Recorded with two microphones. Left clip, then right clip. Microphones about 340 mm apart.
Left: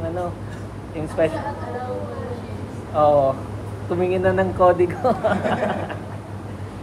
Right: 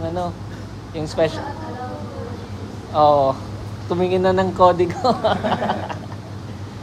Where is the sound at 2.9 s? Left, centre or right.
Right.